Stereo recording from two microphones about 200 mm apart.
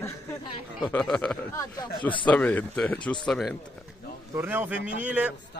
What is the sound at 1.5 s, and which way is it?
Speech, 20° left (ahead or behind).